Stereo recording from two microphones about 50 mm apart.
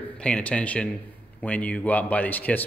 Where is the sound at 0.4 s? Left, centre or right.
Left.